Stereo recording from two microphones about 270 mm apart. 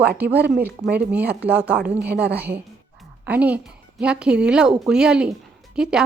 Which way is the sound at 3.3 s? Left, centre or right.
Centre.